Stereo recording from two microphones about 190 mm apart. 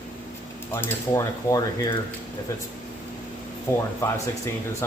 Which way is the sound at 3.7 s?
15° left (ahead or behind).